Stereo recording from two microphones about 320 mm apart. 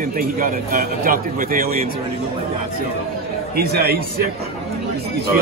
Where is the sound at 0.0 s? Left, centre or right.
Right.